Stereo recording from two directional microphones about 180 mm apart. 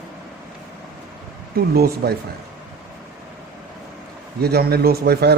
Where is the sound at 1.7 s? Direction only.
60° right (ahead or behind).